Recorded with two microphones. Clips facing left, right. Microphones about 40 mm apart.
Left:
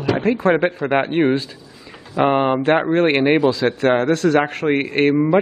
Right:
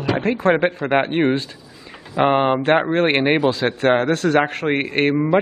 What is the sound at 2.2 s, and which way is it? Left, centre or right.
Speech, centre.